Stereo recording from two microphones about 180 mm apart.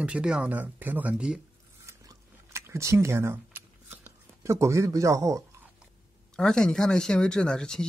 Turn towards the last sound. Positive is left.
turn(degrees=5)  # may be behind; listen again after turning